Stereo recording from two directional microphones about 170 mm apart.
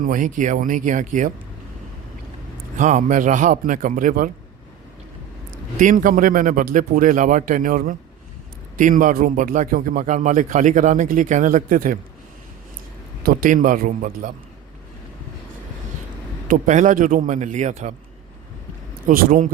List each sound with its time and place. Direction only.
0.0 s a man's voice: 50° right (ahead or behind)
2.7 s a man's voice: 45° right (ahead or behind)
5.8 s a man's voice: 50° right (ahead or behind)
13.2 s a man's voice: 55° right (ahead or behind)
16.5 s a man's voice: 50° right (ahead or behind)
19.0 s a man's voice: 55° right (ahead or behind)